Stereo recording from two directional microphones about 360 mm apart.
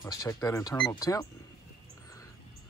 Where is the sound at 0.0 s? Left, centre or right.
Centre.